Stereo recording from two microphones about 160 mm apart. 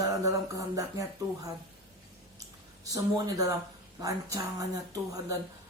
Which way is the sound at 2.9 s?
20° right (ahead or behind).